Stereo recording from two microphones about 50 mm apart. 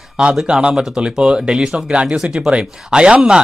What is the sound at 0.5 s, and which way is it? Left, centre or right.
Speech, centre.